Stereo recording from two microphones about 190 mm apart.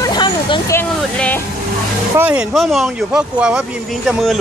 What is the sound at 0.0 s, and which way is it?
Vehicle, 25° left (ahead or behind).